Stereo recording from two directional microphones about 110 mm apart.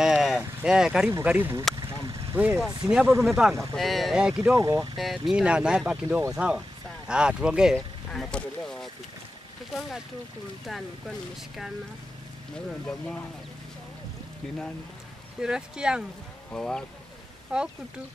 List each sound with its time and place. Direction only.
0.0 s a sound: 5° right (ahead or behind)
0.6 s speech: 5° right (ahead or behind)
3.2 s speech: centre (ahead or behind)
4.6 s speech: 35° right (ahead or behind)
4.9 s speech: centre (ahead or behind)
7.7 s speech: 5° left (ahead or behind)
15.4 s speech: 5° right (ahead or behind)
16.5 s speech: 5° left (ahead or behind)
17.5 s speech: 5° right (ahead or behind)